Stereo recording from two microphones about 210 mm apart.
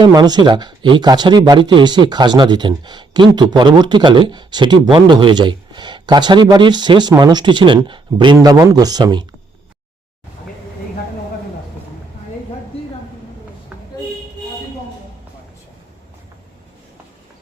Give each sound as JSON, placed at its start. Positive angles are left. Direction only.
{"t": 0.0, "sound": "speech", "side_deg": -20}